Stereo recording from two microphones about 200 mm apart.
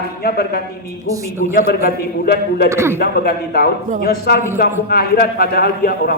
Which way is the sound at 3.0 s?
50° left (ahead or behind).